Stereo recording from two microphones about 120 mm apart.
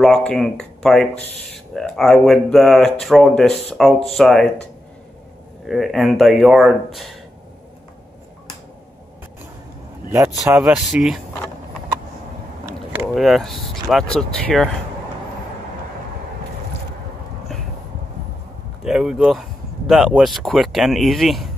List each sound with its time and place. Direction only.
0.0 s speech: 5° left (ahead or behind)
5.7 s speech: centre (ahead or behind)
10.0 s speech: 20° right (ahead or behind)
10.7 s speech: 5° right (ahead or behind)
13.1 s speech: centre (ahead or behind)
18.9 s speech: 5° right (ahead or behind)